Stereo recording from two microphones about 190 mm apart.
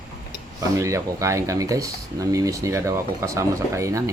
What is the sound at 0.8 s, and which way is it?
Speech, 15° right (ahead or behind).